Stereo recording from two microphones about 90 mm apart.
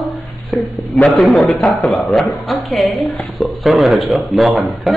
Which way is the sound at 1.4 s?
15° left (ahead or behind).